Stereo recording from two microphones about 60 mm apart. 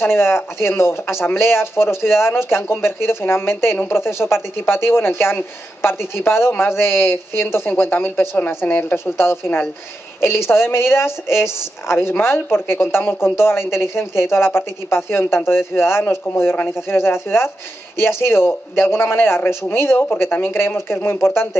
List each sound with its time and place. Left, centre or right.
0.0 s a man's voice: left
8.6 s speech: left
8.9 s a man's voice: left